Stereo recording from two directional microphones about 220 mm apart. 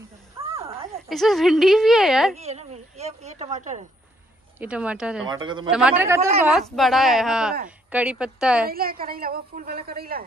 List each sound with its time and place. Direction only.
0.4 s a sound: 25° right (ahead or behind)
1.0 s a woman's voice: centre (ahead or behind)
2.3 s a woman's voice: 30° right (ahead or behind)
4.6 s a woman's voice: 5° right (ahead or behind)
5.3 s speech: 20° right (ahead or behind)
5.7 s a man's voice: 5° right (ahead or behind)
6.7 s a woman's voice: centre (ahead or behind)
8.6 s a woman's voice: 40° right (ahead or behind)